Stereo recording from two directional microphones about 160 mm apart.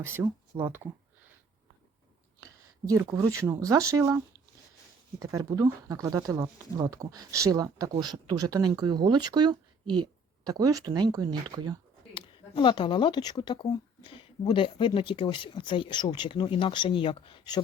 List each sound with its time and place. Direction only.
0.0 s speech: 15° right (ahead or behind)
0.5 s speech: 30° right (ahead or behind)
2.4 s speech: 20° right (ahead or behind)
5.2 s speech: 20° right (ahead or behind)
12.1 s speech: 30° left (ahead or behind)